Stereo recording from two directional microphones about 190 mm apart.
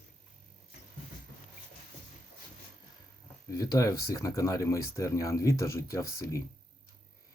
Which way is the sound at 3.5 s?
20° left (ahead or behind).